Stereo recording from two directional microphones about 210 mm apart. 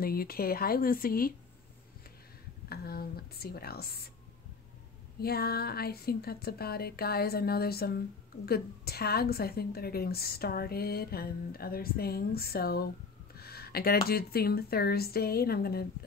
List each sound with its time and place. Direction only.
0.0 s a woman's voice: 45° left (ahead or behind)
2.7 s a woman's voice: 45° left (ahead or behind)
5.2 s a woman's voice: 50° left (ahead or behind)